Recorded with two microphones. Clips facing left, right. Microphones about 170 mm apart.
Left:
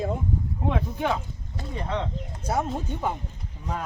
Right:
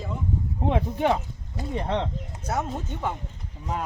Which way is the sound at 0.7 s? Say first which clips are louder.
Right 3 dB; 30° right (ahead or behind).